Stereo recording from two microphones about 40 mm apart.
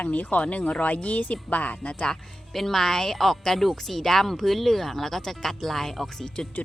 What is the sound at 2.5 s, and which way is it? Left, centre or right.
Speech, centre.